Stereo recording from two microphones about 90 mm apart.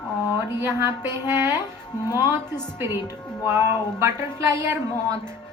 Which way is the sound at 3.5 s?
30° right (ahead or behind).